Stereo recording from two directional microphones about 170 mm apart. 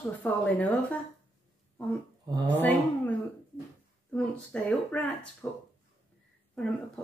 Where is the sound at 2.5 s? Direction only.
10° left (ahead or behind).